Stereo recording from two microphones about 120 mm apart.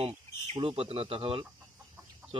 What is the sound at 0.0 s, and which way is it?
Speech, 55° right (ahead or behind).